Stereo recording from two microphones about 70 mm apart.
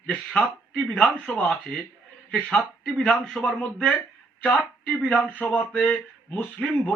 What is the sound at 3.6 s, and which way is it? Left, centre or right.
Speech, centre.